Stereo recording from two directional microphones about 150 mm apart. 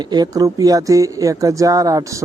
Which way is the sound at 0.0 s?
25° right (ahead or behind).